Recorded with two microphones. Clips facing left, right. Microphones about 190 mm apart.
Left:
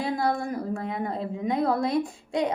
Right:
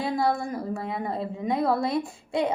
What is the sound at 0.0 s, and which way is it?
A woman's voice, centre (ahead or behind).